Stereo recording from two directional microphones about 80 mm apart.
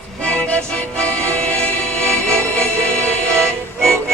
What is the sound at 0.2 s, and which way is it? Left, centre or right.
Music, centre.